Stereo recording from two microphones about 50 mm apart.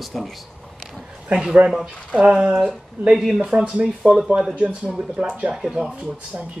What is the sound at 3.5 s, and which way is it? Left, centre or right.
Speech, centre.